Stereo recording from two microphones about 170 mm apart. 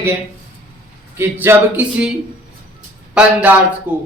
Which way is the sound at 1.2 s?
10° right (ahead or behind).